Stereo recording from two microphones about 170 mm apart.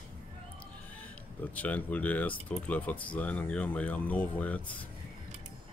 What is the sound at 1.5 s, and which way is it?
Speech, 10° left (ahead or behind).